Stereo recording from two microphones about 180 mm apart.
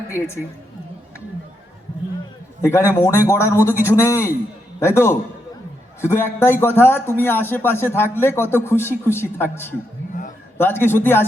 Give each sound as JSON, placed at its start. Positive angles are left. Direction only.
{"t": 2.6, "sound": "a man's voice", "side_deg": 15}